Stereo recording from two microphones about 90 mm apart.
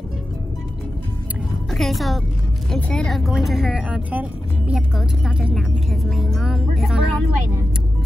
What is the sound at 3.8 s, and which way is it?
Speech, 15° right (ahead or behind).